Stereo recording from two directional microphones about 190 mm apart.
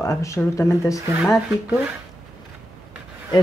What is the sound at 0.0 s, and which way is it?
Speech, 15° left (ahead or behind).